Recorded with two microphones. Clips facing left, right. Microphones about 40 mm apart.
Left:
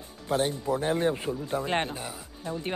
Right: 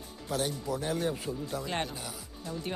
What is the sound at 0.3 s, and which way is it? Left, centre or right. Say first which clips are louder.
Speech: left 6 dB; left.